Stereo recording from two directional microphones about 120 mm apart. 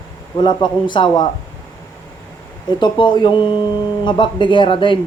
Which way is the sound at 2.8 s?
40° left (ahead or behind).